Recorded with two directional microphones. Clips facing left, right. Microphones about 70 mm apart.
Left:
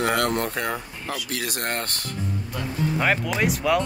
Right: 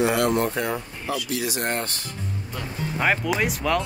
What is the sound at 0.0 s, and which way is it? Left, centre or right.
Speech, left.